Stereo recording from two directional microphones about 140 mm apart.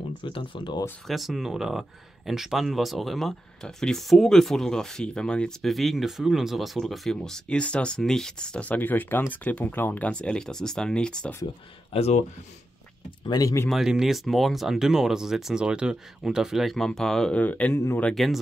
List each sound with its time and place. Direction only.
0.2 s speech: 35° left (ahead or behind)
1.0 s speech: centre (ahead or behind)
11.4 s speech: 45° left (ahead or behind)
13.3 s speech: 25° left (ahead or behind)
13.7 s speech: 5° right (ahead or behind)
18.1 s speech: centre (ahead or behind)